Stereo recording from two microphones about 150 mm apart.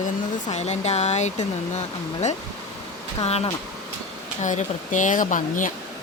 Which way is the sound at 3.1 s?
45° left (ahead or behind).